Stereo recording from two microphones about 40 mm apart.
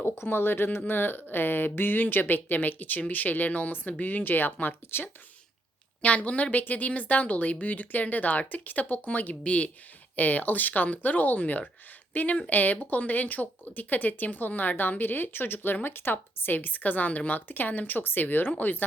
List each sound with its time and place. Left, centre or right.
0.3 s speech: left
0.9 s speech: left
6.0 s a woman's voice: left
9.3 s a woman's voice: left
10.2 s speech: left